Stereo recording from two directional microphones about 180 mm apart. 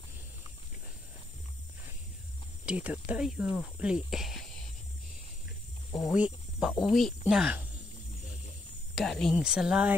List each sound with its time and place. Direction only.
2.6 s cricket: 5° right (ahead or behind)
3.8 s speech: 5° right (ahead or behind)
5.9 s cricket: 15° left (ahead or behind)
6.1 s speech: 5° right (ahead or behind)
8.9 s speech: centre (ahead or behind)